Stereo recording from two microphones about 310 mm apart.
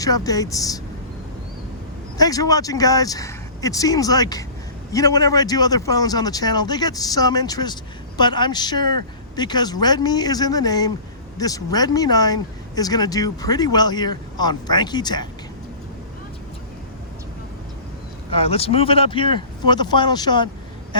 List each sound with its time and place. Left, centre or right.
0.0 s a man's voice: centre
2.1 s a man's voice: centre
18.3 s a man's voice: centre